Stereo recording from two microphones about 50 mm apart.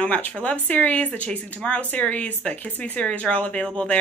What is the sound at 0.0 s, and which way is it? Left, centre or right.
A woman's voice, left.